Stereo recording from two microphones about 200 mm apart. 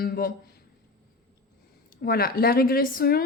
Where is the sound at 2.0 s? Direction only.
50° left (ahead or behind).